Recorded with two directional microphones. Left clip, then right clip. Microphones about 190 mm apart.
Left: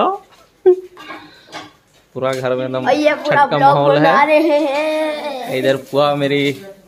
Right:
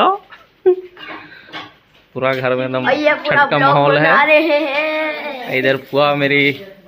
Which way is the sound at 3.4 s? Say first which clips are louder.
Left 2 dB; 5° left (ahead or behind).